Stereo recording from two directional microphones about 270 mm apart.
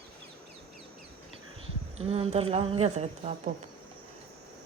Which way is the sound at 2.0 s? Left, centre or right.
Right.